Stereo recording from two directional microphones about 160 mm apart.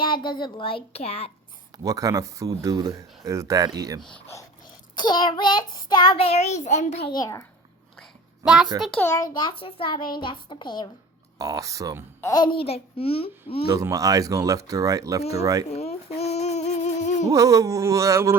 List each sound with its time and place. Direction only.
0.0 s a child's voice: 30° left (ahead or behind)
1.8 s speech: 20° right (ahead or behind)
4.9 s child singing: 25° left (ahead or behind); by 7.0 s 45° left (ahead or behind)
7.1 s child singing: 20° left (ahead or behind)
8.4 s a child's voice: 5° right (ahead or behind)
8.8 s a child's voice: 10° left (ahead or behind)
9.3 s a child's voice: 30° left (ahead or behind)
10.2 s child singing: 30° left (ahead or behind)
11.3 s speech: 20° right (ahead or behind)
12.2 s a child's voice: 25° left (ahead or behind)
13.7 s speech: 20° right (ahead or behind)
15.7 s a sound: 40° left (ahead or behind)
17.3 s speech: 20° right (ahead or behind)